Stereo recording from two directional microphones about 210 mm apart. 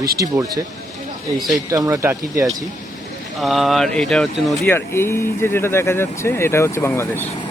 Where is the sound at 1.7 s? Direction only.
15° right (ahead or behind).